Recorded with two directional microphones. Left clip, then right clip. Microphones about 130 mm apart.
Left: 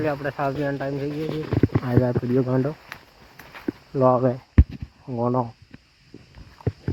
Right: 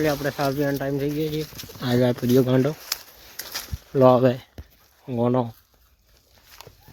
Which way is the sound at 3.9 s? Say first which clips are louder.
Right 3 dB; 35° right (ahead or behind).